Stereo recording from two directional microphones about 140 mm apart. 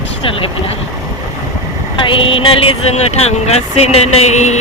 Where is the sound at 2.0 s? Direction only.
40° left (ahead or behind).